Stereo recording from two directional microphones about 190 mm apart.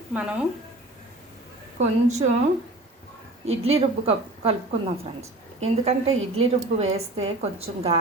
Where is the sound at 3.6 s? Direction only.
30° right (ahead or behind).